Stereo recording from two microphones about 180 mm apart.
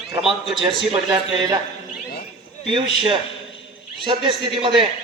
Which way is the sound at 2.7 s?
25° right (ahead or behind).